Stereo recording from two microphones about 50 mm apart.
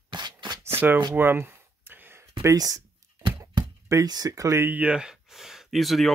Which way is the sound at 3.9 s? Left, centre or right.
Right.